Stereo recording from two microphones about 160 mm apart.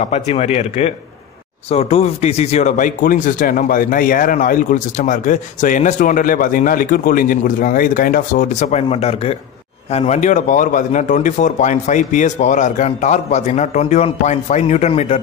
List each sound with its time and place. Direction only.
0.0 s speech: 45° left (ahead or behind)